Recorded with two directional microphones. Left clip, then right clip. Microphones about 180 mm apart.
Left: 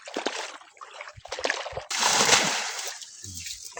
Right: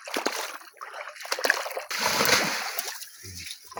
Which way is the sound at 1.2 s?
65° right (ahead or behind).